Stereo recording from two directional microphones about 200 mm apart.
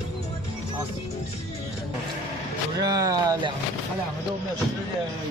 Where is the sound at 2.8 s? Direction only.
20° right (ahead or behind).